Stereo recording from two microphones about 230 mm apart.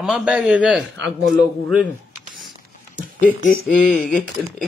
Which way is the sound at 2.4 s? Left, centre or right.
Centre.